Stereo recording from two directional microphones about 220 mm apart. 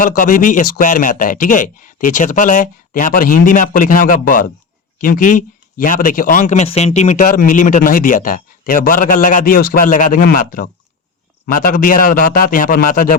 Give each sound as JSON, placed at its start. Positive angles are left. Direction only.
{"t": 0.2, "sound": "speech", "side_deg": 35}